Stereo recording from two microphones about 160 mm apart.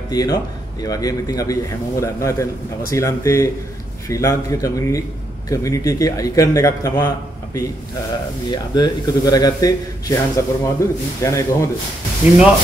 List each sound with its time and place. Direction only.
0.1 s a man's voice: 25° left (ahead or behind)